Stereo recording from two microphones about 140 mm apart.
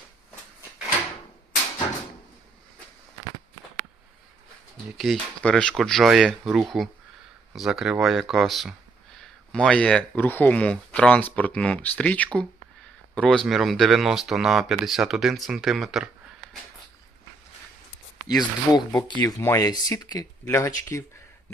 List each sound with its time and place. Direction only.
4.9 s speech: centre (ahead or behind)
18.3 s speech: 30° left (ahead or behind)